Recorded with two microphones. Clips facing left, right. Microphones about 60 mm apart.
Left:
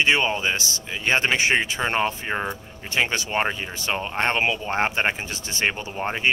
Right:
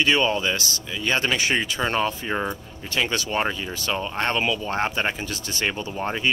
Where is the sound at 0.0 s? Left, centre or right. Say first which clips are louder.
Even; left.